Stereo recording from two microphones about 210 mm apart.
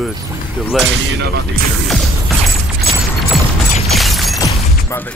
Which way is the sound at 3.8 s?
Centre (ahead or behind).